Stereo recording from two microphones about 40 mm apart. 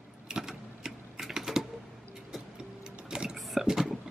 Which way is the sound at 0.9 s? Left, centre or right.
Centre.